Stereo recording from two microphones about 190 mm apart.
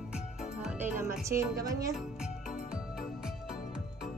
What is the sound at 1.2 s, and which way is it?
Speech, 15° right (ahead or behind).